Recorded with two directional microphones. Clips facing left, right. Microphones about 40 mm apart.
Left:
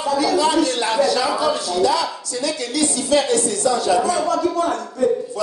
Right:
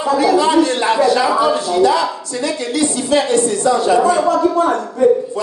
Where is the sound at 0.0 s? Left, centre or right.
Right.